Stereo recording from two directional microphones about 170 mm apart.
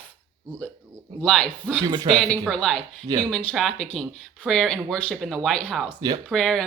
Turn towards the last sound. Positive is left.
turn(degrees=5)  # may be behind; listen again after turning